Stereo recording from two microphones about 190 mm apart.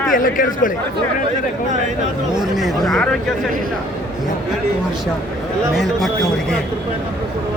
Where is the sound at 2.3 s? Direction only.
Centre (ahead or behind).